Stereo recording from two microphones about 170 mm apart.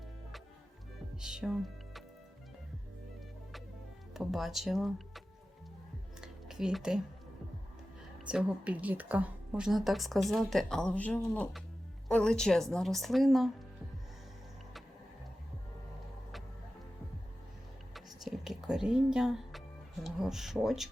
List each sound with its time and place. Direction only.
1.2 s music: 5° right (ahead or behind)
4.1 s speech: centre (ahead or behind)
6.2 s a sound: 5° right (ahead or behind)
8.3 s a woman's voice: 5° right (ahead or behind)
17.9 s a sound: centre (ahead or behind)
20.1 s a woman's voice: centre (ahead or behind)